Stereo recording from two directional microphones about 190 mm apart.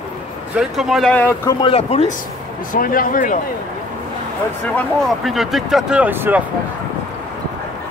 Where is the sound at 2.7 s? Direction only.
45° left (ahead or behind).